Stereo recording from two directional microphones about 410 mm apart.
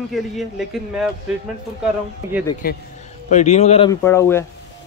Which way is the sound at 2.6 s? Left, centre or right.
Left.